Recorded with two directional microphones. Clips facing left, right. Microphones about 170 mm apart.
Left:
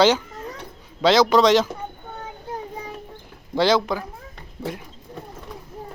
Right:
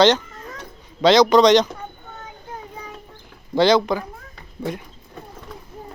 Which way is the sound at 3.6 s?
5° left (ahead or behind).